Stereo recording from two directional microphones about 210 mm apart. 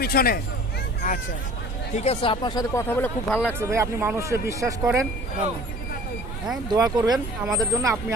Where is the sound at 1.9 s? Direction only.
30° left (ahead or behind); by 3.4 s 10° left (ahead or behind).